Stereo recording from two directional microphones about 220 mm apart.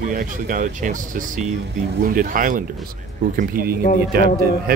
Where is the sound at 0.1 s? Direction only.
40° right (ahead or behind).